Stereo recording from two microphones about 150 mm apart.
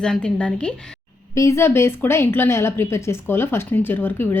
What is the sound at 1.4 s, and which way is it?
A woman's voice, 20° left (ahead or behind).